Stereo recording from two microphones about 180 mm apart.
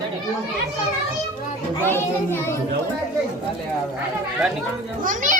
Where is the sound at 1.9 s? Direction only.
15° left (ahead or behind).